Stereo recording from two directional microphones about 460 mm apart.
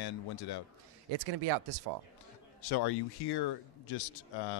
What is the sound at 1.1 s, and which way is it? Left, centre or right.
Speech, right.